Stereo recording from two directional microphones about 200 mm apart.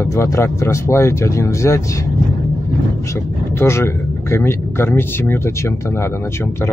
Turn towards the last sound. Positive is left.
turn(degrees=10)  # may be behind; listen again after turning